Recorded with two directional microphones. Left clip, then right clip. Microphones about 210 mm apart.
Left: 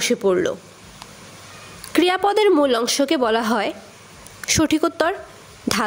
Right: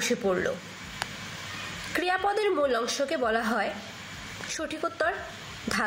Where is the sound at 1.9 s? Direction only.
55° left (ahead or behind).